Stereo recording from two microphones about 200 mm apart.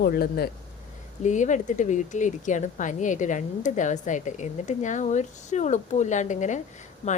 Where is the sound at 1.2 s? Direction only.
40° left (ahead or behind).